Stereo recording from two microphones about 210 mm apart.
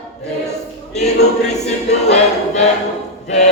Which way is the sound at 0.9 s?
30° left (ahead or behind).